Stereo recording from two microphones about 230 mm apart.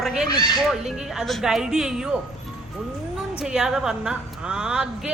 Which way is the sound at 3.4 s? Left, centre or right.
Centre.